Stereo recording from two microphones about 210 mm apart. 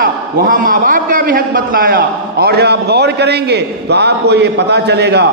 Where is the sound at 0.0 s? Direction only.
40° right (ahead or behind).